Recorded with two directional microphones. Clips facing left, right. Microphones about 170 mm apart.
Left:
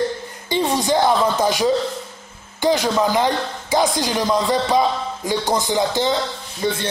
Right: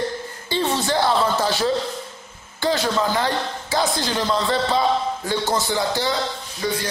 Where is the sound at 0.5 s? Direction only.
15° left (ahead or behind).